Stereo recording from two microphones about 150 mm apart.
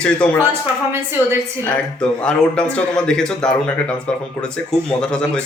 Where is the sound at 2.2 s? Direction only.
5° left (ahead or behind).